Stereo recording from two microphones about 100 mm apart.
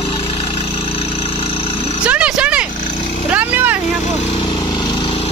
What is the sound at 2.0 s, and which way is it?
Roaring cats, 10° right (ahead or behind).